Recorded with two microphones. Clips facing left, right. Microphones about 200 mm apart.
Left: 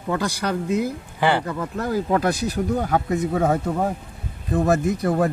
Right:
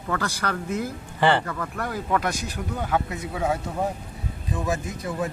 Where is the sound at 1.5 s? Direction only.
20° left (ahead or behind); by 3.8 s 50° left (ahead or behind).